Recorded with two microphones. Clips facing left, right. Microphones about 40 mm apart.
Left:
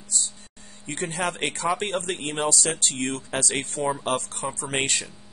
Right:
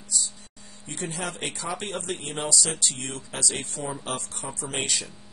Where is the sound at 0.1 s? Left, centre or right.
Left.